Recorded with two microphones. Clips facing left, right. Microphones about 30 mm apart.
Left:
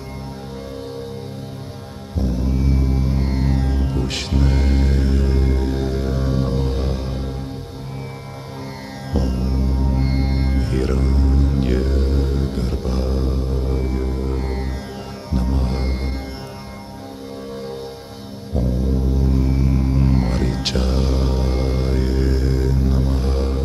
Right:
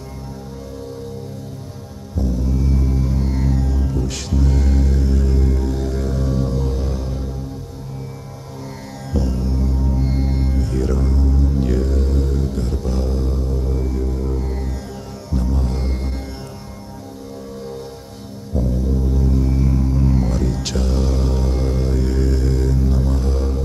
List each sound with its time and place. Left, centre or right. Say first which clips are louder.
2.1 s music: even; left
9.1 s music: even; left
19.1 s music: even; left
19.9 s music: even; left